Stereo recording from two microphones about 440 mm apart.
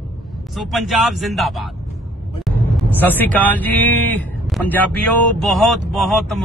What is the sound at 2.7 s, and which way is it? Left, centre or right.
Speech, centre.